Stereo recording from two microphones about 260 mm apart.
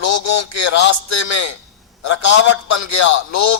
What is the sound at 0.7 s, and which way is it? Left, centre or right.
Speech, left.